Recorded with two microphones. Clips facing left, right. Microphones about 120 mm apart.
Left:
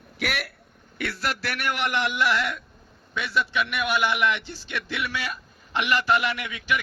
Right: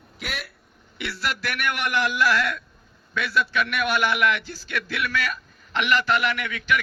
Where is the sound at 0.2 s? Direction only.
70° left (ahead or behind).